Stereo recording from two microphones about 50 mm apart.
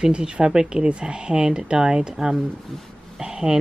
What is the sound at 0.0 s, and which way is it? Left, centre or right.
Speech, centre.